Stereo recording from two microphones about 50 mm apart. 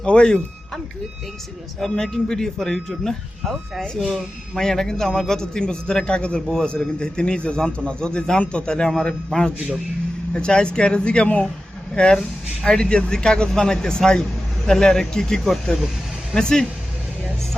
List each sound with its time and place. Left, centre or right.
0.0 s speech: centre
1.8 s a man's voice: centre